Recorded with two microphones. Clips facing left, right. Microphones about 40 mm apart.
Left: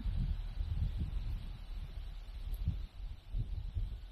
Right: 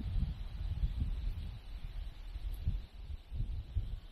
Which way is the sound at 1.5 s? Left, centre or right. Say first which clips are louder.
Even; right.